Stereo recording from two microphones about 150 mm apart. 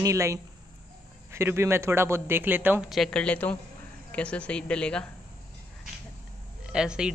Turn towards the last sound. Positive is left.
turn(degrees=-5)  # may be behind; listen again after turning